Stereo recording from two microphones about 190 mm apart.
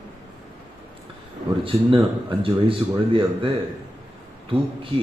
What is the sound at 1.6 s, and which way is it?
Speech, 30° right (ahead or behind).